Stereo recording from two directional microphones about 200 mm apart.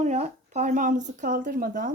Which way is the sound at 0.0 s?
35° right (ahead or behind).